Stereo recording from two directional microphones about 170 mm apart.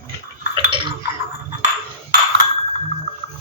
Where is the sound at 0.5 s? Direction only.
25° right (ahead or behind).